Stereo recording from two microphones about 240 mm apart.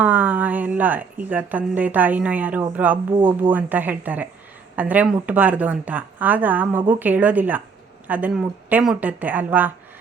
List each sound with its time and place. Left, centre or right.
0.0 s a woman's voice: centre
3.1 s speech: centre
3.5 s a woman's voice: centre